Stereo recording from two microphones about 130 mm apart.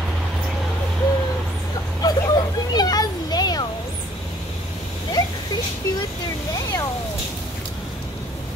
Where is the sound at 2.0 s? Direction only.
30° left (ahead or behind).